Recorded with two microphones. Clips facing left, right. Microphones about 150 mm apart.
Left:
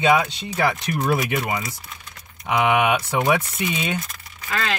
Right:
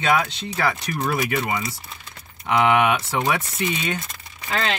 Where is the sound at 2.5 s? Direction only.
15° left (ahead or behind).